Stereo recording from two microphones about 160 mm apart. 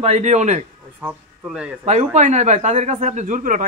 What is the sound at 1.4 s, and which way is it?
Speech, 5° right (ahead or behind).